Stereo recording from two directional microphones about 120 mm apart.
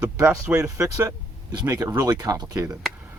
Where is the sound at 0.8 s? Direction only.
25° right (ahead or behind).